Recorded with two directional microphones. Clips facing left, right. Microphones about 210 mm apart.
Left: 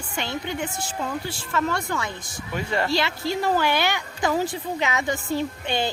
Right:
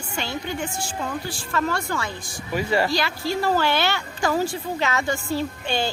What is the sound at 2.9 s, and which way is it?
Speech, 25° left (ahead or behind).